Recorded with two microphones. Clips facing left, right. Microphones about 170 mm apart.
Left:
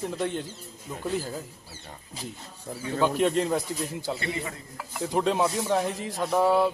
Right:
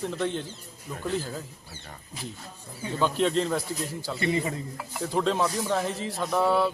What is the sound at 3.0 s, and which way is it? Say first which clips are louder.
Speech: left 1 dB; 10° left (ahead or behind).